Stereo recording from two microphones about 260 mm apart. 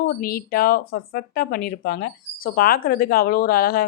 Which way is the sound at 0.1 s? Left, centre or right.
Left.